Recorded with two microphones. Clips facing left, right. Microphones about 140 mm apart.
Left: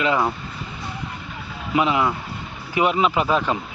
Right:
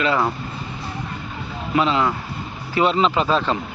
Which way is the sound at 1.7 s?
15° left (ahead or behind).